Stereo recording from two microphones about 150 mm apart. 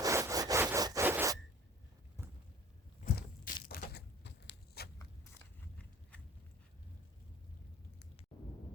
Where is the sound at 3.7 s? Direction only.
90° left.